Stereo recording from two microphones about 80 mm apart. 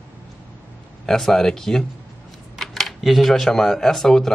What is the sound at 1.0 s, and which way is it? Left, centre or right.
Speech, centre.